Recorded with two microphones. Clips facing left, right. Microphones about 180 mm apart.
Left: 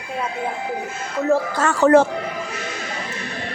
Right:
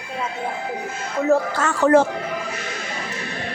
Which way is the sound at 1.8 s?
75° left (ahead or behind).